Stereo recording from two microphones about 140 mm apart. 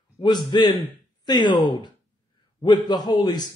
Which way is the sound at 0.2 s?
30° left (ahead or behind).